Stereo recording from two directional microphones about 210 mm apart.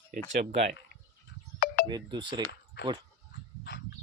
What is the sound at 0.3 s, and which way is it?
Speech, 30° right (ahead or behind).